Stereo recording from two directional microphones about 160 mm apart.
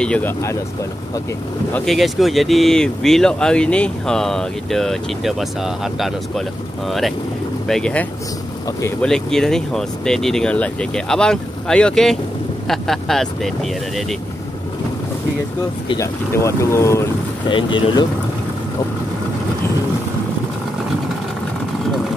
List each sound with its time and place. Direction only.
0.0 s speech: 5° left (ahead or behind)
1.7 s speech: centre (ahead or behind)
16.0 s speech: 20° left (ahead or behind)
17.5 s speech: 30° left (ahead or behind)